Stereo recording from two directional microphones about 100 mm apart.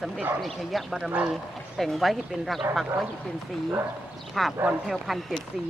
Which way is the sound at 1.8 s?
Centre (ahead or behind).